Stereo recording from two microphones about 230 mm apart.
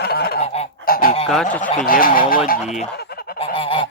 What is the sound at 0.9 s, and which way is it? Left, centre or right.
Goose, left.